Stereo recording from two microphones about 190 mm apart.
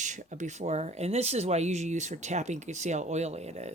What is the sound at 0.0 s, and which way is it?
Speech, 40° right (ahead or behind).